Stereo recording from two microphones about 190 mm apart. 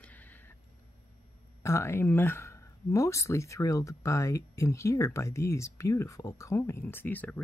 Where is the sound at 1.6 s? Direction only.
15° left (ahead or behind).